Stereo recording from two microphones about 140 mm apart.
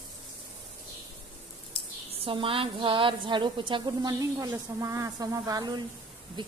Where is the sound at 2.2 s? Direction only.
40° right (ahead or behind).